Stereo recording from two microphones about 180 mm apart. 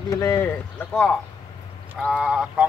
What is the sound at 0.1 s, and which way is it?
Speech, 15° left (ahead or behind).